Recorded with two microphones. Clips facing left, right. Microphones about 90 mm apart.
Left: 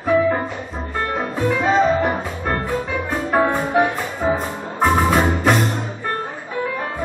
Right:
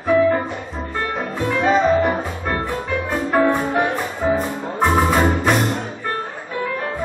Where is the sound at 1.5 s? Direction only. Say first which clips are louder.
Right 1 dB; centre (ahead or behind).